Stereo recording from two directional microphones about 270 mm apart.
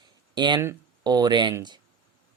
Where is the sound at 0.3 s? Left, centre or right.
Centre.